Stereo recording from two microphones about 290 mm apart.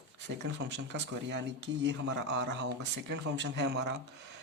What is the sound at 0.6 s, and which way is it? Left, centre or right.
Speech, right.